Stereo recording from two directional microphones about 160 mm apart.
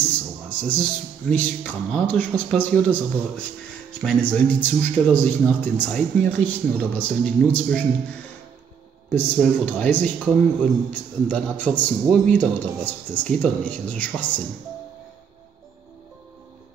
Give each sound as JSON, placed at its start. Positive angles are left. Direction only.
{"t": 0.0, "sound": "a sound", "side_deg": 10}
{"t": 1.3, "sound": "speech", "side_deg": 10}
{"t": 9.1, "sound": "speech", "side_deg": 10}